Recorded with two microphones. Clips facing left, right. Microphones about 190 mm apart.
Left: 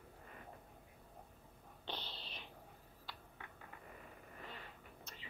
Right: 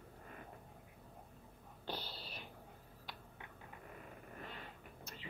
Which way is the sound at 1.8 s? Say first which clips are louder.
Right 3 dB; 10° right (ahead or behind).